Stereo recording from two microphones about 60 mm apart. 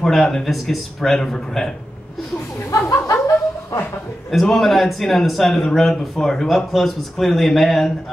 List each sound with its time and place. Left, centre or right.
0.0 s a man's voice: centre
3.1 s chuckle: left
4.3 s a man's voice: centre